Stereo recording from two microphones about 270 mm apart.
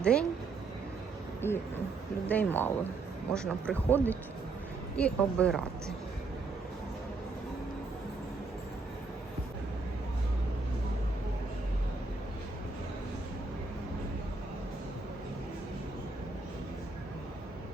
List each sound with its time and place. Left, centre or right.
0.0 s speech: centre
1.4 s speech: centre